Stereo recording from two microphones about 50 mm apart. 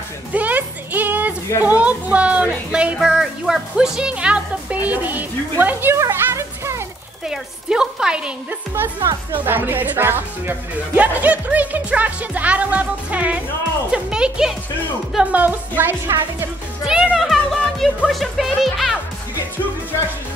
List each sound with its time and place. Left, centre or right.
0.3 s music: right
1.6 s a woman's voice: right
2.7 s speech: centre; by 5.9 s right
5.9 s music: right
7.2 s a woman's voice: centre
9.3 s speech: right
11.0 s speech: right
15.3 s a woman's voice: right
16.1 s speech: right
16.8 s speech: centre
17.2 s speech: centre